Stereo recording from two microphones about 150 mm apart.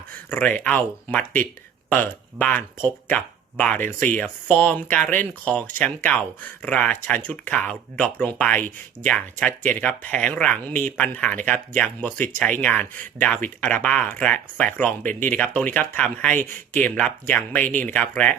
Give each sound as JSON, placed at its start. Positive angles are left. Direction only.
{"t": 0.3, "sound": "speech", "side_deg": 10}
{"t": 3.8, "sound": "speech", "side_deg": -60}
{"t": 4.2, "sound": "speech", "side_deg": 10}